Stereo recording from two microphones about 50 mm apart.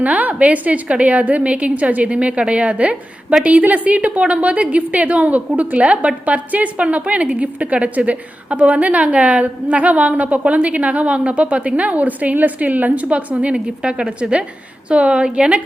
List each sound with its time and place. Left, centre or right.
0.0 s a woman's voice: right